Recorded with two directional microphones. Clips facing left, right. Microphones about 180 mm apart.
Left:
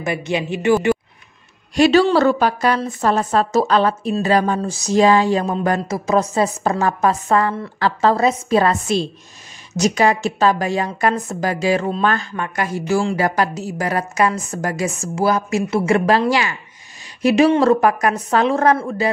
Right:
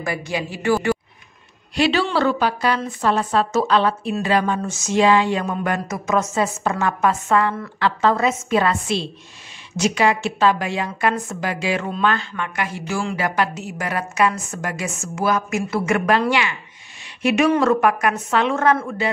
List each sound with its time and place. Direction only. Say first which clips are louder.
0.0 s speech: left 3 dB; 20° left (ahead or behind)
1.8 s a woman's voice: left 6 dB; 40° left (ahead or behind)